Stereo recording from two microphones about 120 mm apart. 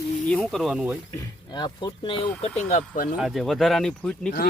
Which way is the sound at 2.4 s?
65° left (ahead or behind).